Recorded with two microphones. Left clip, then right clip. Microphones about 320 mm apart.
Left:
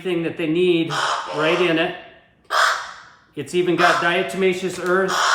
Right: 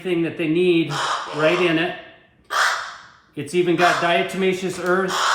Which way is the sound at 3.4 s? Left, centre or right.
Centre.